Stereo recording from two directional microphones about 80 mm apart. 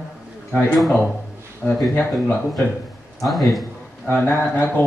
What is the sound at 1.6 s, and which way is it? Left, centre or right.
Speech, centre.